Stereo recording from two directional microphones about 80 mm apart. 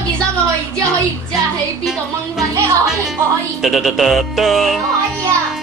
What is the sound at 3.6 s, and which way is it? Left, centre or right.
Music, centre.